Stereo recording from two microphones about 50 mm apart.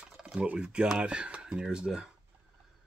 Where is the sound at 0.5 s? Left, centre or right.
Centre.